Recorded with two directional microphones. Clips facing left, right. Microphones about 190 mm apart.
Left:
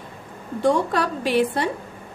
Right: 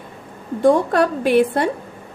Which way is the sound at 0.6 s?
50° right (ahead or behind).